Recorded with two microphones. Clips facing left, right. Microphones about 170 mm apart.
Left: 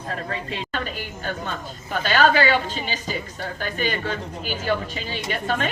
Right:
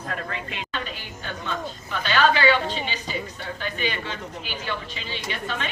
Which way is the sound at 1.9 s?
45° left (ahead or behind).